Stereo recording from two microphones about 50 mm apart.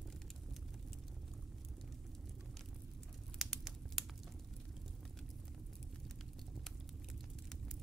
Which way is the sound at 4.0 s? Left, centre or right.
Centre.